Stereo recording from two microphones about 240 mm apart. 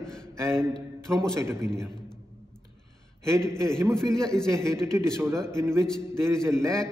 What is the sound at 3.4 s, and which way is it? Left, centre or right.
A man's voice, centre.